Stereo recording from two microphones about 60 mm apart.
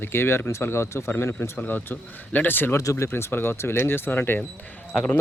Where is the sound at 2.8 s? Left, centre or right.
Left.